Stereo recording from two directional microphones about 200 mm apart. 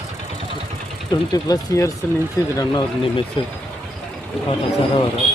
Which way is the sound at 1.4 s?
15° left (ahead or behind).